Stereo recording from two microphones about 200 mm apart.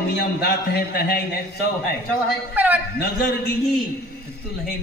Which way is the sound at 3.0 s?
50° left (ahead or behind).